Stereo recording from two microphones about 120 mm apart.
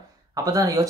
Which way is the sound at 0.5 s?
30° right (ahead or behind).